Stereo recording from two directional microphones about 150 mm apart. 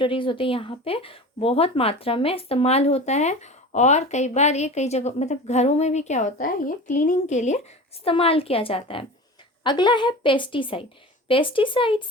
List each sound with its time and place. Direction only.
0.0 s a woman's voice: 35° left (ahead or behind)